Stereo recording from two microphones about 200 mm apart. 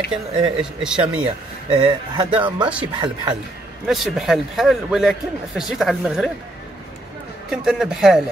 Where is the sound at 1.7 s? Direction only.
25° right (ahead or behind).